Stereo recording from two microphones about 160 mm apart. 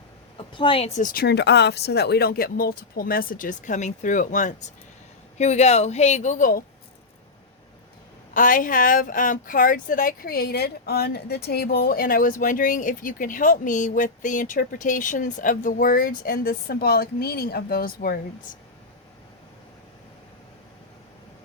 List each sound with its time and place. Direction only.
0.3 s a woman's voice: 30° left (ahead or behind)
0.9 s speech: 65° left (ahead or behind)
8.3 s speech: 55° left (ahead or behind)